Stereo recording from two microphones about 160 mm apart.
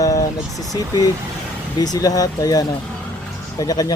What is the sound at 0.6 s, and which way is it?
Speech, 20° left (ahead or behind).